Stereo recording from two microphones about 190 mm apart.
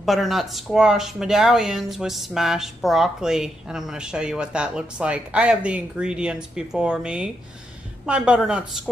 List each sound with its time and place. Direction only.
0.0 s speech: centre (ahead or behind)